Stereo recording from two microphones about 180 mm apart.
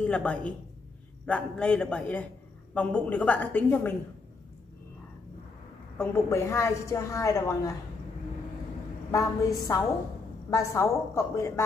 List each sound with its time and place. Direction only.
0.0 s a woman's voice: 5° left (ahead or behind)
5.9 s a woman's voice: 15° left (ahead or behind)
9.6 s a woman's voice: 20° left (ahead or behind)